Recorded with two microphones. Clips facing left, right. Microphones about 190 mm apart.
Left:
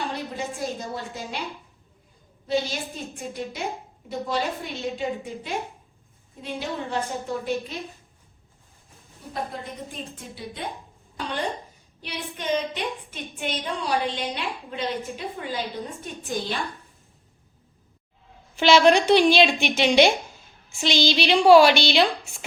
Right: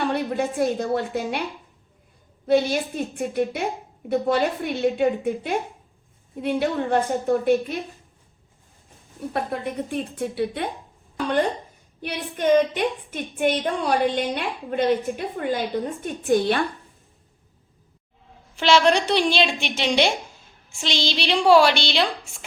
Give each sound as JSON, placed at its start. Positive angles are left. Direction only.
{"t": 0.0, "sound": "a woman's voice", "side_deg": -60}
{"t": 2.5, "sound": "a woman's voice", "side_deg": -60}
{"t": 9.3, "sound": "a woman's voice", "side_deg": -65}
{"t": 12.0, "sound": "a woman's voice", "side_deg": -55}
{"t": 18.6, "sound": "speech", "side_deg": 5}